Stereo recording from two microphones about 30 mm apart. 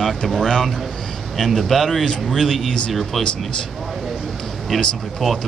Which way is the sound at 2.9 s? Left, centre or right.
Centre.